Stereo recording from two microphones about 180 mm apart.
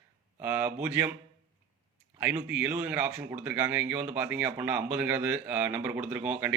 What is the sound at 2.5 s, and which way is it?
A man's voice, 10° right (ahead or behind).